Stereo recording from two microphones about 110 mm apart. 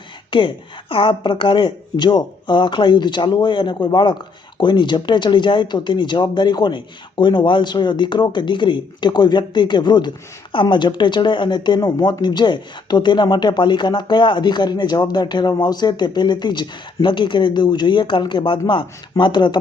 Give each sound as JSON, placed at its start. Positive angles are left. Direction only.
{"t": 0.3, "sound": "speech", "side_deg": 50}